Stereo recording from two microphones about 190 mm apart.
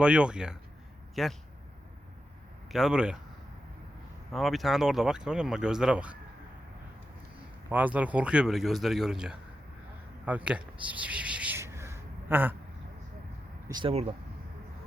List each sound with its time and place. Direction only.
0.0 s speech: 5° right (ahead or behind)
2.6 s speech: centre (ahead or behind)
4.3 s speech: centre (ahead or behind)
7.7 s speech: 10° right (ahead or behind)
10.2 s a sound: 5° right (ahead or behind)
13.7 s speech: 20° right (ahead or behind)